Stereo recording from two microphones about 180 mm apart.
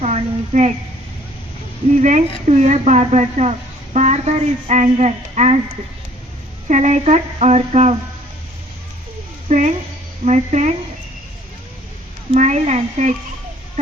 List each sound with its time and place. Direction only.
0.0 s a sound: 40° right (ahead or behind)
2.0 s speech: 40° right (ahead or behind)
6.7 s speech: 40° right (ahead or behind)
9.5 s speech: 40° right (ahead or behind)
12.3 s speech: 40° right (ahead or behind)